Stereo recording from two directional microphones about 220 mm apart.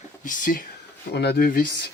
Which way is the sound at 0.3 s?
35° left (ahead or behind).